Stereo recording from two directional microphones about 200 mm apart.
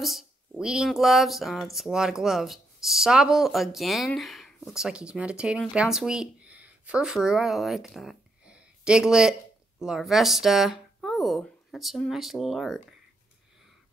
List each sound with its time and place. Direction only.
0.0 s speech: centre (ahead or behind)